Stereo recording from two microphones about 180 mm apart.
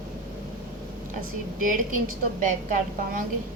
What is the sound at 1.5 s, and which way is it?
A woman's voice, 50° right (ahead or behind).